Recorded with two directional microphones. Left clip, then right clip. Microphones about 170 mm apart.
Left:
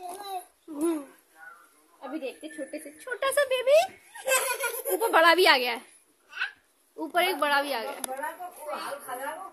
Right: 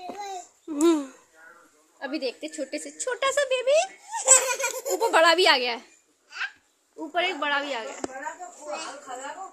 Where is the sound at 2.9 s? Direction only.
20° right (ahead or behind); by 3.9 s centre (ahead or behind).